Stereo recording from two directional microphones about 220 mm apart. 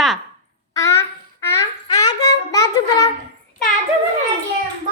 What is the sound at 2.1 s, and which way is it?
Child singing, 15° left (ahead or behind).